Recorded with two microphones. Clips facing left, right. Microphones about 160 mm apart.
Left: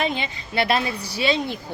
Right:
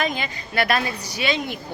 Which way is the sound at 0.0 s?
25° left (ahead or behind).